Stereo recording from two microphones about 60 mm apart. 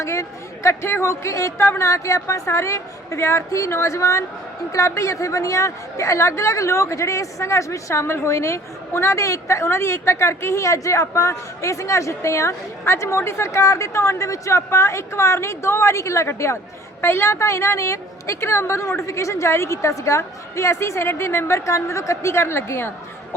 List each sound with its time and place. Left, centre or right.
0.0 s a woman's voice: left